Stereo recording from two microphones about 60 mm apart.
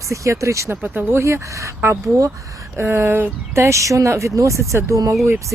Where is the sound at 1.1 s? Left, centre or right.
Right.